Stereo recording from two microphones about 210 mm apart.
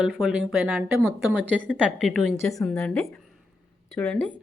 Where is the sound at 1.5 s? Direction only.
5° left (ahead or behind).